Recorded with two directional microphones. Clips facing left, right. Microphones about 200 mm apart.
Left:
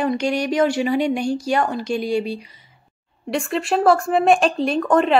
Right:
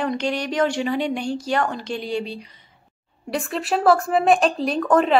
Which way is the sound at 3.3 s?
Centre (ahead or behind).